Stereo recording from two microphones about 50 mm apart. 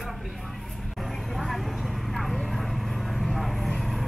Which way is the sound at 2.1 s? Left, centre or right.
Centre.